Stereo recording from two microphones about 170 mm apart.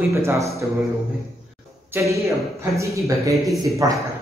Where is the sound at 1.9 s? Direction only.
20° right (ahead or behind).